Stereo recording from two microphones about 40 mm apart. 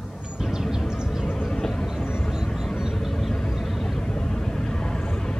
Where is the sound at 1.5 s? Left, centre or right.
Centre.